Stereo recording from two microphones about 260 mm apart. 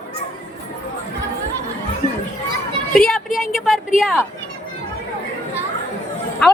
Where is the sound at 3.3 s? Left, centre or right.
Centre.